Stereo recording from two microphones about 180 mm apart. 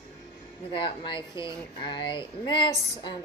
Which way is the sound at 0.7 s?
25° left (ahead or behind).